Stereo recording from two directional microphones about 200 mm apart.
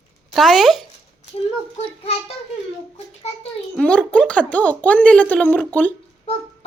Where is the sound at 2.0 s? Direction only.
30° left (ahead or behind).